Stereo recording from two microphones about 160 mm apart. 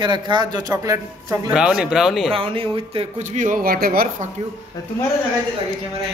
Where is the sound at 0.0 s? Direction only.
30° right (ahead or behind).